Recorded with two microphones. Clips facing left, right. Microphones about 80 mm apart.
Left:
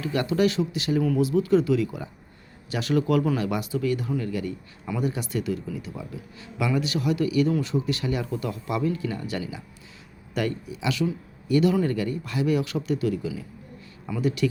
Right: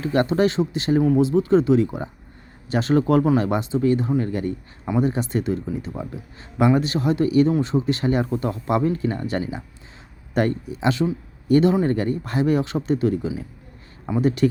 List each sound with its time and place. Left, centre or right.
0.0 s speech: right